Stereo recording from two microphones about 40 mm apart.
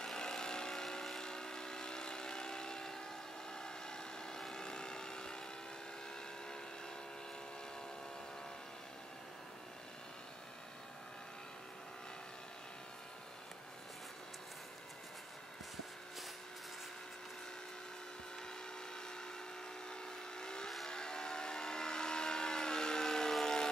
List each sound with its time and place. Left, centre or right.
0.0 s vehicle: centre
19.9 s vehicle: centre
23.3 s a sound: centre